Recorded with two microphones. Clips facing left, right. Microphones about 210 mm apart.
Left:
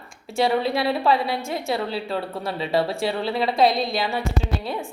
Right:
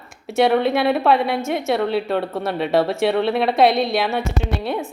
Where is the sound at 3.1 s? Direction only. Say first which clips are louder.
Right 5 dB; 60° right (ahead or behind).